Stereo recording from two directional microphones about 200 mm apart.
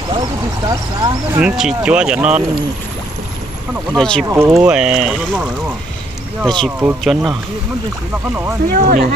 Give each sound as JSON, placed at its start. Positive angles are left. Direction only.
{"t": 0.7, "sound": "speech", "side_deg": -20}
{"t": 1.4, "sound": "speech", "side_deg": -5}
{"t": 3.9, "sound": "speech", "side_deg": 0}
{"t": 4.3, "sound": "speech", "side_deg": -15}
{"t": 4.7, "sound": "speech", "side_deg": -5}
{"t": 6.4, "sound": "speech", "side_deg": 5}
{"t": 8.6, "sound": "speech", "side_deg": -45}